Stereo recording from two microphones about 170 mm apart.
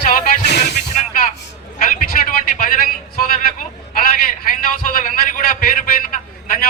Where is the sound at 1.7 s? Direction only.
50° left (ahead or behind).